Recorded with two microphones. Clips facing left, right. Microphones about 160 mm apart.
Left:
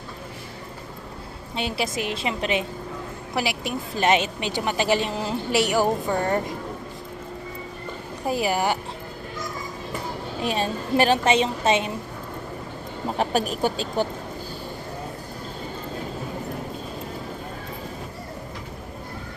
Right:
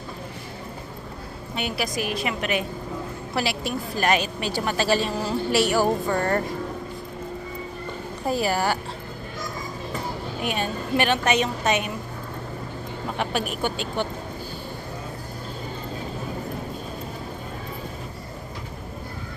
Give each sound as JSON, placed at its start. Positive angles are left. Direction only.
{"t": 1.5, "sound": "a woman's voice", "side_deg": 25}
{"t": 8.3, "sound": "a woman's voice", "side_deg": 15}
{"t": 10.4, "sound": "a woman's voice", "side_deg": 30}
{"t": 13.1, "sound": "speech", "side_deg": 35}